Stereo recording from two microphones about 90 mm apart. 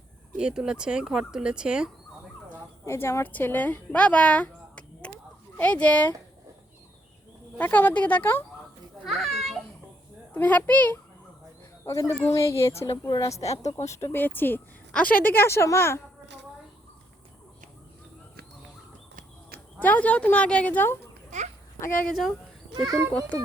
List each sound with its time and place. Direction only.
0.3 s speech: 10° right (ahead or behind)
2.8 s a woman's voice: 30° left (ahead or behind)
7.6 s speech: 20° left (ahead or behind)
9.0 s children playing: centre (ahead or behind)
10.3 s a woman's voice: 20° left (ahead or behind)
11.9 s a woman's voice: 35° left (ahead or behind)
19.8 s a woman's voice: 15° left (ahead or behind)
22.1 s speech: centre (ahead or behind)